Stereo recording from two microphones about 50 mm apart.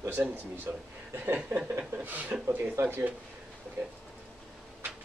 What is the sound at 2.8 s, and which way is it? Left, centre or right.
Speech, right.